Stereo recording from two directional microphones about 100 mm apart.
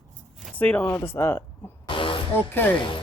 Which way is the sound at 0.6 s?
15° left (ahead or behind).